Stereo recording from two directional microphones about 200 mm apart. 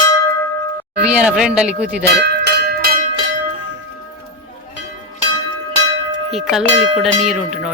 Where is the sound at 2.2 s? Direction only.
55° right (ahead or behind).